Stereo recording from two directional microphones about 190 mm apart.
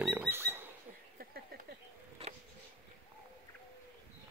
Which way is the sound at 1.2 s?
50° right (ahead or behind).